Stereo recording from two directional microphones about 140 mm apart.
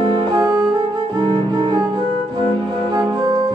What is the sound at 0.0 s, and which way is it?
Music, 35° right (ahead or behind).